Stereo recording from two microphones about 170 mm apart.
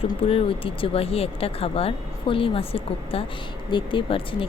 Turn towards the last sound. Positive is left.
turn(degrees=30)  # may be behind; listen again after turning